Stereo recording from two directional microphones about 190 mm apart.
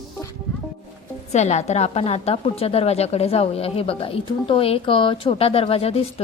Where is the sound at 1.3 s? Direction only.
35° left (ahead or behind).